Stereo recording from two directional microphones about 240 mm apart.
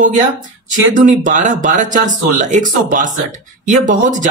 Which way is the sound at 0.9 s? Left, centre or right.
Right.